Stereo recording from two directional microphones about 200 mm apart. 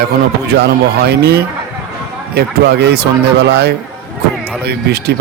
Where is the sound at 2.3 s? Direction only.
50° right (ahead or behind).